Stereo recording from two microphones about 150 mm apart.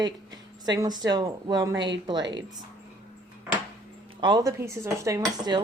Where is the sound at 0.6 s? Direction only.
25° right (ahead or behind).